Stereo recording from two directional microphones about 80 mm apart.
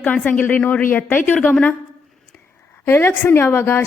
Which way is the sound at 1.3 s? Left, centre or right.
Centre.